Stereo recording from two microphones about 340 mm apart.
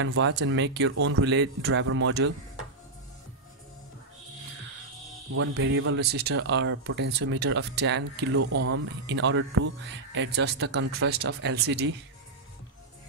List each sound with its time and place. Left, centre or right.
0.0 s speech: right
5.3 s speech: right
8.4 s speech: right